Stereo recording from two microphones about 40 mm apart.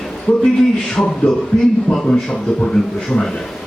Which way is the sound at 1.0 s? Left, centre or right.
Left.